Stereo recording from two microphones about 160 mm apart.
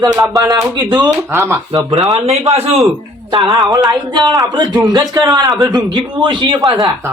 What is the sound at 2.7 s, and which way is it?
Speech, 25° right (ahead or behind).